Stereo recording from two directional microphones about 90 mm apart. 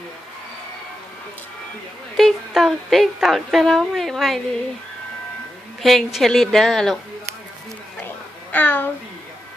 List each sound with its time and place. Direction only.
2.1 s speech: centre (ahead or behind)
5.8 s speech: centre (ahead or behind)
8.5 s a child's voice: 20° left (ahead or behind)